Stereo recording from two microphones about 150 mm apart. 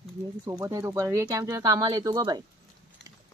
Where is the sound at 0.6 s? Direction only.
20° right (ahead or behind).